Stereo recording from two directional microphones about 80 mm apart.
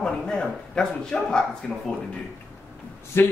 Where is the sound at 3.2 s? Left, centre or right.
Left.